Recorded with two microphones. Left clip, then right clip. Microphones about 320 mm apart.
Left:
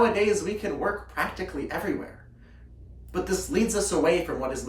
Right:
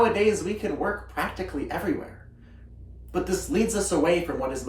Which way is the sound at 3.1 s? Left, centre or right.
Centre.